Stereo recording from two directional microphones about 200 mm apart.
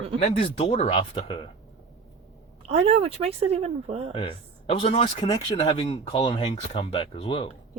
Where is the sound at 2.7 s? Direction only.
30° right (ahead or behind).